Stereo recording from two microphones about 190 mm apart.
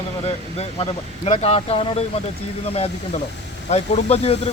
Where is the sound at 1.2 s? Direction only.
30° left (ahead or behind).